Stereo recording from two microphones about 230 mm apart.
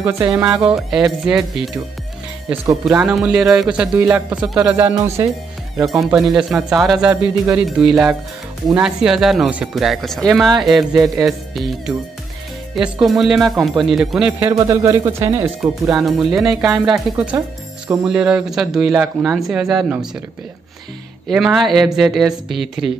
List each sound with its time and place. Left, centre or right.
0.3 s speech: centre
6.1 s speech: centre
14.5 s speech: centre
15.9 s speech: centre
21.3 s speech: centre